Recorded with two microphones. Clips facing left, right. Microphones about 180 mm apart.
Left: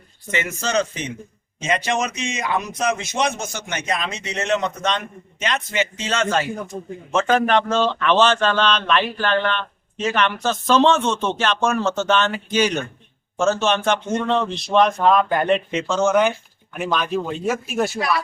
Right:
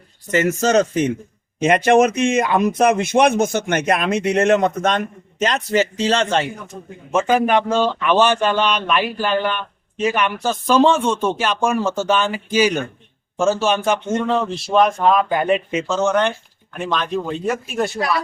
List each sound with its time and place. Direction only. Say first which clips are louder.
0.3 s speech: right 8 dB; 45° right (ahead or behind)
1.5 s speech: right 9 dB; 55° right (ahead or behind); by 6.5 s 25° right (ahead or behind)
7.1 s a man's voice: right 2 dB; 10° right (ahead or behind)